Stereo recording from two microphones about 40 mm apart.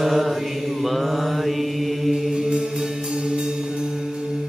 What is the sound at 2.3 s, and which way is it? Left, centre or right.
Music, centre.